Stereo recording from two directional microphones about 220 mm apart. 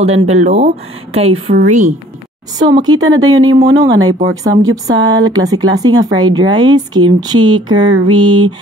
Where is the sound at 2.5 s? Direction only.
15° right (ahead or behind).